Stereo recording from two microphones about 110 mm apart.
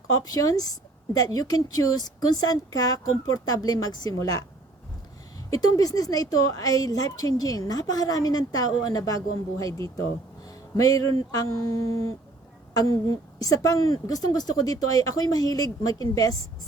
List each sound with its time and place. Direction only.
0.2 s speech: 35° left (ahead or behind)
5.5 s speech: 35° left (ahead or behind)
11.9 s a sound: 30° left (ahead or behind)
12.7 s a woman's voice: 35° left (ahead or behind)